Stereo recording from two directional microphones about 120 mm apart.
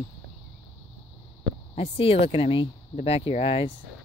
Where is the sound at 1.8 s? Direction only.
50° left (ahead or behind).